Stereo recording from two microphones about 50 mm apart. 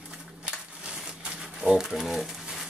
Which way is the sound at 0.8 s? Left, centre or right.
Centre.